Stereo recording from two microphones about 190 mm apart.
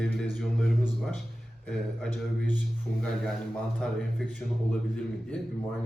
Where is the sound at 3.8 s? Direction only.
5° left (ahead or behind).